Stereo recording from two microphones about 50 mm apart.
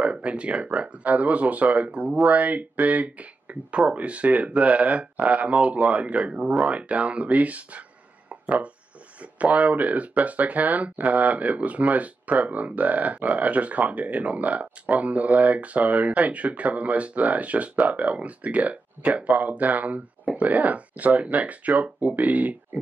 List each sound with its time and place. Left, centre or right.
0.0 s speech: right
8.3 s a sound: right
9.2 s speech: right